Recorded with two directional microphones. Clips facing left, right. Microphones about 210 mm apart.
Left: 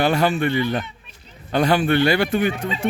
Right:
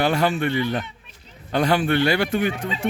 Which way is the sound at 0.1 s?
35° left (ahead or behind).